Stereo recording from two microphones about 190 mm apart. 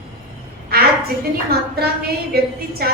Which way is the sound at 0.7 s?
55° right (ahead or behind).